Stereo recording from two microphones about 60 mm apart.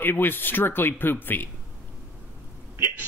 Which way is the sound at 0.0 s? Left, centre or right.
Left.